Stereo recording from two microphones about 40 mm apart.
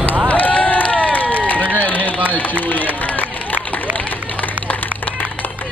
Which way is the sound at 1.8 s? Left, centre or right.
Left.